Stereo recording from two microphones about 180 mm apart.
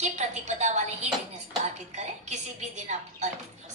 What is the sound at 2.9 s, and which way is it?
Speech, 40° right (ahead or behind).